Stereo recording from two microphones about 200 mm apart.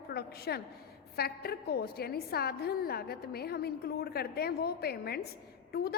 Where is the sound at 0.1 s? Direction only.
50° left (ahead or behind).